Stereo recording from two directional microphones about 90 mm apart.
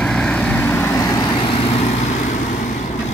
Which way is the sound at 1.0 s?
40° left (ahead or behind).